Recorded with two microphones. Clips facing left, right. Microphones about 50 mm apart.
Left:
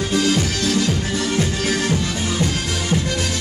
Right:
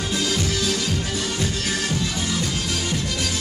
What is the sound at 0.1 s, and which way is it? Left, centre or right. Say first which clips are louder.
Music: left 5 dB; left.